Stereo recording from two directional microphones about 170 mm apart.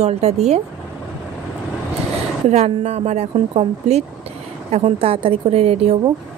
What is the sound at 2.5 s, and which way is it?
Speech, 40° right (ahead or behind).